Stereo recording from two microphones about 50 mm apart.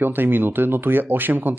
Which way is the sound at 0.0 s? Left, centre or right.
Right.